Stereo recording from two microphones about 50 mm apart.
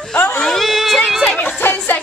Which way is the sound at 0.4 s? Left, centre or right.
Centre.